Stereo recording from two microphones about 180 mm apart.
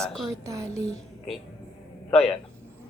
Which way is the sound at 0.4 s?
15° right (ahead or behind).